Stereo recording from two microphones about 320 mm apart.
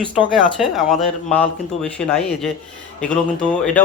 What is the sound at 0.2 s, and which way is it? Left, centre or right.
Speech, centre.